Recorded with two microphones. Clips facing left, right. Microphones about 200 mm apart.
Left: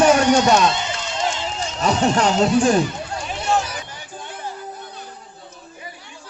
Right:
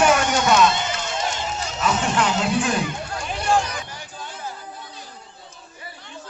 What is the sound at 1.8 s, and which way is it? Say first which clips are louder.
A man's voice: left 4 dB; 40° left (ahead or behind).